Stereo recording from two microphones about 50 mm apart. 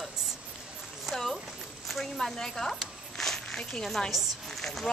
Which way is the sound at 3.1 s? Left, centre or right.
Centre.